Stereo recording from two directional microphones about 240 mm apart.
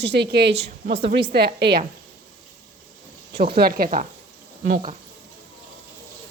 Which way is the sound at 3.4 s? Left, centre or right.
Right.